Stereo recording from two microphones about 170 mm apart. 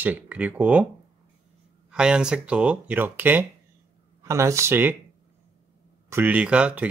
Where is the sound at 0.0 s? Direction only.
10° right (ahead or behind).